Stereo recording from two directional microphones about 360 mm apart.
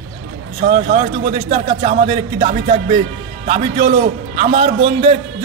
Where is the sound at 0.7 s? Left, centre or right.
Centre.